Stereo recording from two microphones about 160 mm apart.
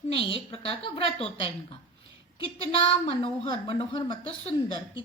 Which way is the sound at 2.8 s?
30° left (ahead or behind).